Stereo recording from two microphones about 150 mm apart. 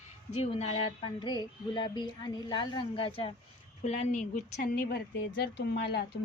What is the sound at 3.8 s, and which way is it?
Speech, 55° left (ahead or behind).